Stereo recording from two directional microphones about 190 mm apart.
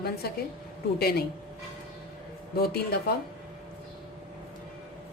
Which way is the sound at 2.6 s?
55° left (ahead or behind).